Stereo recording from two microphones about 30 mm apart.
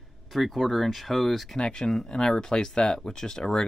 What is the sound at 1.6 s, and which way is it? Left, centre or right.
Speech, left.